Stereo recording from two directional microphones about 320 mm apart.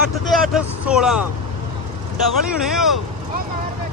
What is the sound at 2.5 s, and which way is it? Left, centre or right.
Speech, centre.